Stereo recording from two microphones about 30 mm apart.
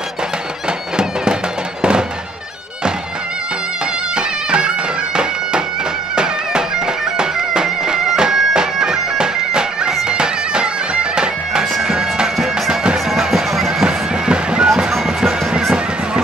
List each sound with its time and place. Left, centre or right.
0.9 s bagpipes: right
4.1 s bagpipes: right
6.1 s music: right
7.2 s bagpipes: right
13.1 s music: centre
13.8 s bagpipes: right
15.0 s music: right